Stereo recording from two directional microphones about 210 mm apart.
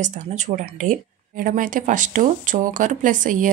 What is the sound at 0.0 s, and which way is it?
Speech, 35° right (ahead or behind).